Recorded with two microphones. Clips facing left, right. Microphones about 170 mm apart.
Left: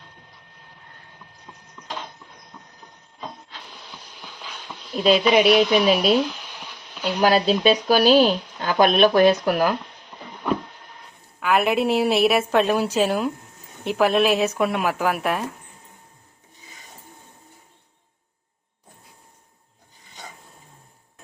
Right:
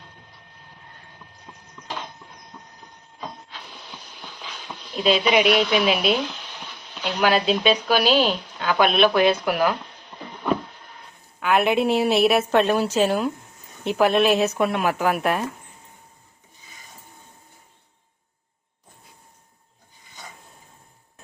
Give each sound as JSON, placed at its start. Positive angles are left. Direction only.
{"t": 5.0, "sound": "speech", "side_deg": 40}
{"t": 6.6, "sound": "a sound", "side_deg": 10}
{"t": 7.2, "sound": "speech", "side_deg": 35}
{"t": 11.3, "sound": "a woman's voice", "side_deg": 0}